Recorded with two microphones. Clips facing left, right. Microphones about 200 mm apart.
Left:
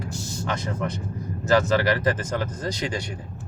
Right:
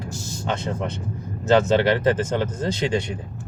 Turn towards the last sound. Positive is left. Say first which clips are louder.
# right 5 dB
turn(degrees=-25)  # may be behind; listen again after turning